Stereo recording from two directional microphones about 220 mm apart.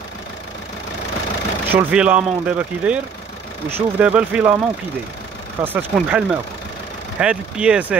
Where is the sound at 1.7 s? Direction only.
10° right (ahead or behind).